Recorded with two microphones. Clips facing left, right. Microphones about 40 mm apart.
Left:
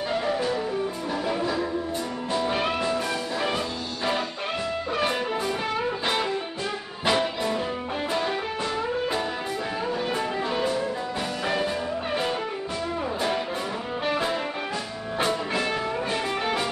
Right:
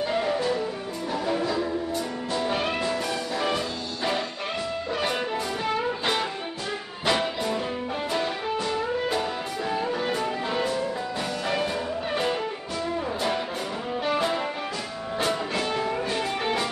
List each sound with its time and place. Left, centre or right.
1.2 s music: centre
7.1 s music: centre
14.1 s music: centre